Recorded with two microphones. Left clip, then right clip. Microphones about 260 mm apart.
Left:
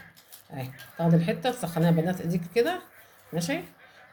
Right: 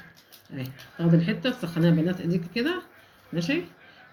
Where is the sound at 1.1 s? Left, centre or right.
Left.